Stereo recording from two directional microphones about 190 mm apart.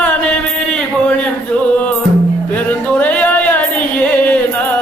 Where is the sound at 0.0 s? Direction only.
5° left (ahead or behind).